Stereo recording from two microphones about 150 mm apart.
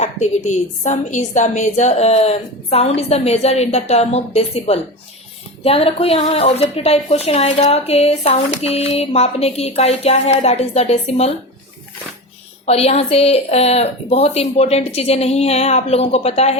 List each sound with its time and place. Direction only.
0.0 s a woman's voice: 50° left (ahead or behind)
12.6 s a woman's voice: 45° left (ahead or behind)